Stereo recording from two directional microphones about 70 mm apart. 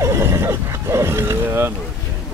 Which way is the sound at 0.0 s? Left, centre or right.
Right.